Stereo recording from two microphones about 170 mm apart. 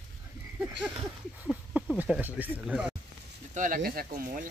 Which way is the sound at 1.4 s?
10° right (ahead or behind).